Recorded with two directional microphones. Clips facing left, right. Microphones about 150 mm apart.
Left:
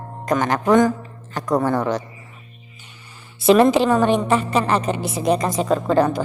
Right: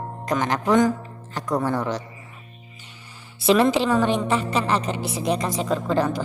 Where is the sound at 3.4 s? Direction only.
50° left (ahead or behind).